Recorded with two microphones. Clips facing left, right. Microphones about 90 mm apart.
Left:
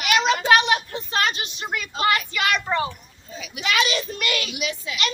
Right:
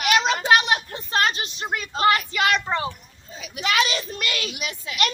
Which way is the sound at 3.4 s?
35° right (ahead or behind).